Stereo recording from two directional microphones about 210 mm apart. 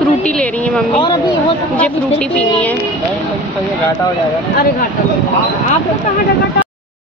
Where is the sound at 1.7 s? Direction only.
5° left (ahead or behind).